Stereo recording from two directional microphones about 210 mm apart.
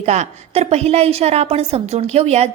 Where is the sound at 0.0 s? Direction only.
30° right (ahead or behind).